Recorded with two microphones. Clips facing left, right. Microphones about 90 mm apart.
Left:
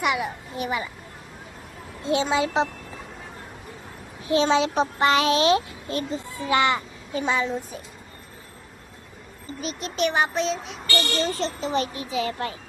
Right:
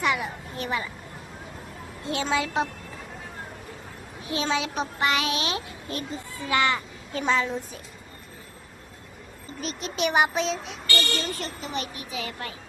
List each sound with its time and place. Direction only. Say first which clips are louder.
0.0 s a child's voice: left 2 dB; 15° left (ahead or behind)
2.0 s a woman's voice: left 4 dB; 20° left (ahead or behind)
4.3 s a child's voice: left 7 dB; 30° left (ahead or behind)
6.4 s a woman's voice: left 3 dB; 20° left (ahead or behind)
7.1 s a child's voice: left 1 dB; 10° left (ahead or behind)
9.6 s a child's voice: left 3 dB; centre (ahead or behind)
10.1 s child singing: right 3 dB; 15° right (ahead or behind)
10.3 s a child's voice: left 2 dB; centre (ahead or behind)
11.3 s a child's voice: left 7 dB; 25° left (ahead or behind)